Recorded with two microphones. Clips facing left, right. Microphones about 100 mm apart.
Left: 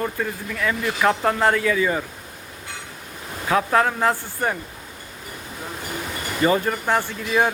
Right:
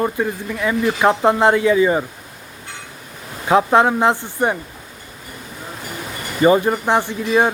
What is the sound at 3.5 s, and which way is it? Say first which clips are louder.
Speech: right 6 dB; 25° right (ahead or behind).